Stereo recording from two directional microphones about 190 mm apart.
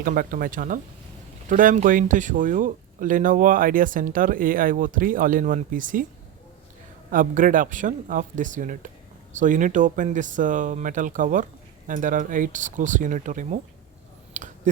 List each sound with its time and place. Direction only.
0.0 s speech: 45° right (ahead or behind)
7.1 s speech: 45° right (ahead or behind)
14.3 s a sound: 40° right (ahead or behind)